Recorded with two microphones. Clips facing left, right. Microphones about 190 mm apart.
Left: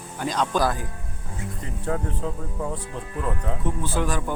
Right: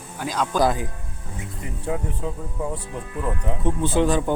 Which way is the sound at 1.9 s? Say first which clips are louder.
Even; 15° right (ahead or behind).